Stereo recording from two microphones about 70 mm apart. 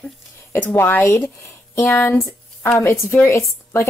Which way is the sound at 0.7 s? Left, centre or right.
Left.